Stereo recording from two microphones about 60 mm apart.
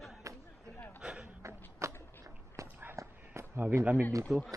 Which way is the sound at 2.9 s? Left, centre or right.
Right.